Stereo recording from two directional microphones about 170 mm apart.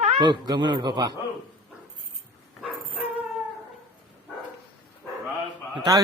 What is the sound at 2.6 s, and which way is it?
Dog, 5° right (ahead or behind).